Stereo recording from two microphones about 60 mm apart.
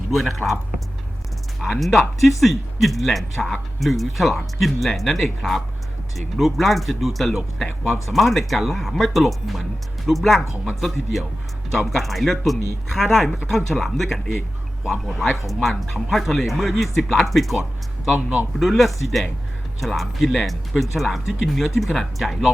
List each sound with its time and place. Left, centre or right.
0.1 s speech: centre
1.5 s speech: centre
18.1 s speech: centre
18.6 s speech: centre